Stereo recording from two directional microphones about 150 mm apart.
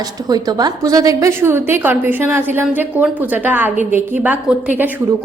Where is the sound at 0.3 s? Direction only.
25° right (ahead or behind).